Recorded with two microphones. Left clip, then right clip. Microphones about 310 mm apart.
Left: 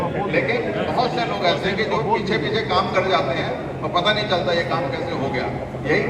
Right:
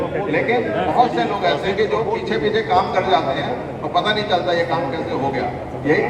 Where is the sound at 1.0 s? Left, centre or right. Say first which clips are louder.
Right 3 dB; right.